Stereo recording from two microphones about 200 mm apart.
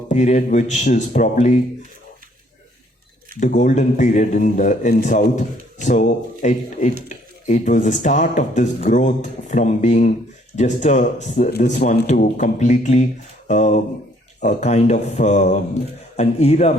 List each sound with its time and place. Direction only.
0.1 s a man's voice: 35° left (ahead or behind)
3.4 s a man's voice: 40° left (ahead or behind)